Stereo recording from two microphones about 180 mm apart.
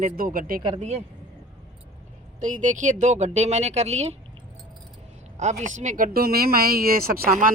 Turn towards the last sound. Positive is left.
turn(degrees=-50)  # may be behind; listen again after turning